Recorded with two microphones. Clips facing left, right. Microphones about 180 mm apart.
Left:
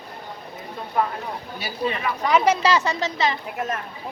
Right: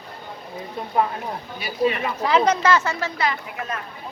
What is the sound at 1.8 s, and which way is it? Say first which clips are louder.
Speech: right 5 dB; 30° right (ahead or behind).